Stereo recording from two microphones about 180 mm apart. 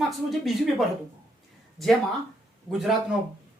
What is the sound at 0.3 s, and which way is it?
A woman's voice, centre (ahead or behind).